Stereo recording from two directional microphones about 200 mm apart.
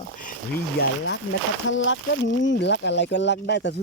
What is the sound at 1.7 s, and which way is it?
Speech, 70° left (ahead or behind).